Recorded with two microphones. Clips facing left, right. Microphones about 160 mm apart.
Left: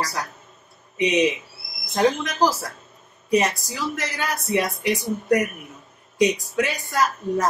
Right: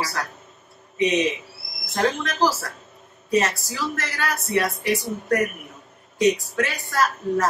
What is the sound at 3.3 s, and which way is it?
A woman's voice, 15° left (ahead or behind).